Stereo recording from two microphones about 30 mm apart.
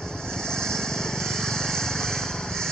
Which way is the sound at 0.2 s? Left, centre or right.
Left.